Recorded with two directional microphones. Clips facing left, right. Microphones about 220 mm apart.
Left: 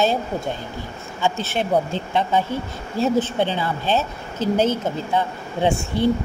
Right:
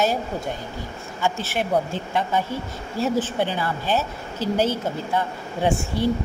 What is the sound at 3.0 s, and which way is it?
A woman's voice, 25° left (ahead or behind).